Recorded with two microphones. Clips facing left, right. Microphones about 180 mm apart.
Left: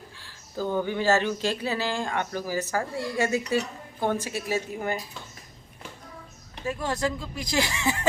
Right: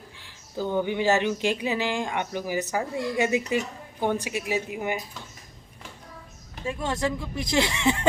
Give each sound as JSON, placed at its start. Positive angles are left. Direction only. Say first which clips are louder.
{"t": 0.2, "sound": "a sound", "louder": "even", "side_deg": -15}
{"t": 0.8, "sound": "speech", "louder": "right 1 dB", "side_deg": -15}
{"t": 6.7, "sound": "speech", "louder": "even", "side_deg": -25}